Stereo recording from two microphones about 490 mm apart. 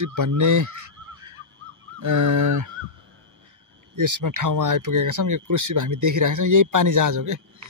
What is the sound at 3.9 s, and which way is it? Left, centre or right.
Speech, right.